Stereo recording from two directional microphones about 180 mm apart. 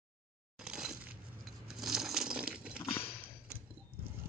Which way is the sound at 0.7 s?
5° right (ahead or behind).